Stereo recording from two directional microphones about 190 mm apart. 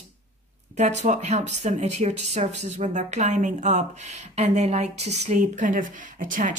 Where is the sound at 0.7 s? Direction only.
35° right (ahead or behind).